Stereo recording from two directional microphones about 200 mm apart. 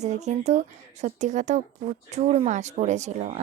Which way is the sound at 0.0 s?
35° right (ahead or behind).